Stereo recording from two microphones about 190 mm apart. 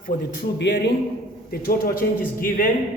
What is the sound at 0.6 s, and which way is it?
Speech, 65° left (ahead or behind).